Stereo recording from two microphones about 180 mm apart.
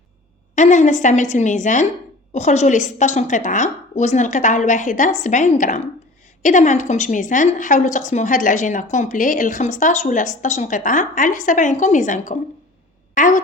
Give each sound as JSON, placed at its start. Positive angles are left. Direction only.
{"t": 0.5, "sound": "a woman's voice", "side_deg": 40}